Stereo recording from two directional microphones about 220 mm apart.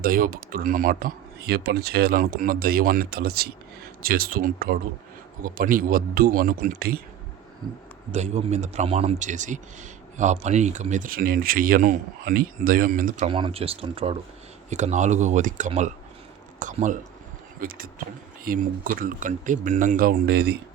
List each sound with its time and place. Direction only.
0.0 s speech: 40° right (ahead or behind)
8.1 s speech: 30° right (ahead or behind)
13.2 s speech: 25° right (ahead or behind); by 20.6 s 45° right (ahead or behind)